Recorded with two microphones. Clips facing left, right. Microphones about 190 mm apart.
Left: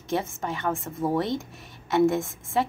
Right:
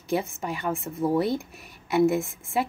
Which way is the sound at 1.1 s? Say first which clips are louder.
Right 2 dB; 10° right (ahead or behind).